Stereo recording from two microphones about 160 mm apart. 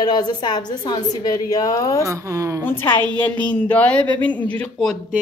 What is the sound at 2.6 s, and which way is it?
A man's voice, 15° left (ahead or behind).